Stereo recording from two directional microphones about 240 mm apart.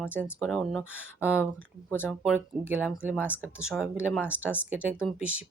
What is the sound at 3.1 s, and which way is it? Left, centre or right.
Speech, centre.